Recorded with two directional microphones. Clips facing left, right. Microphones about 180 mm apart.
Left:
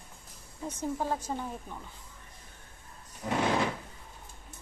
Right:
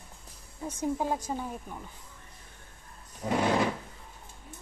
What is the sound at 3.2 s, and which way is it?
Speech, 30° right (ahead or behind).